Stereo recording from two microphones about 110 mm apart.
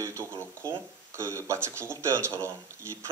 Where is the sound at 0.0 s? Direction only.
25° right (ahead or behind).